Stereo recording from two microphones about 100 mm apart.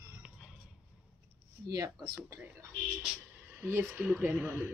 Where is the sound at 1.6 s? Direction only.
40° right (ahead or behind).